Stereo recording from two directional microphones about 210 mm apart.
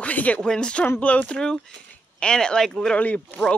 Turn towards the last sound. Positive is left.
turn(degrees=5)  # may be behind; listen again after turning